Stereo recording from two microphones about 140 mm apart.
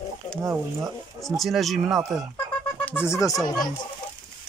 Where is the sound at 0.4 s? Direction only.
20° right (ahead or behind).